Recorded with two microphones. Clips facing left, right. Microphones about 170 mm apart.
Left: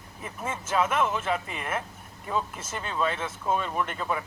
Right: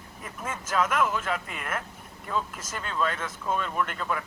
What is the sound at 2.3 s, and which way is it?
Speech, 15° left (ahead or behind).